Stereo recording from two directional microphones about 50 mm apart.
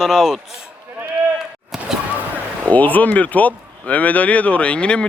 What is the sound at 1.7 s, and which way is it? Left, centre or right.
Basketball bounce, centre.